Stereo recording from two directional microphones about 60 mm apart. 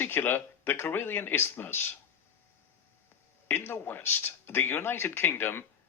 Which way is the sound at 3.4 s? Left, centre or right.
Left.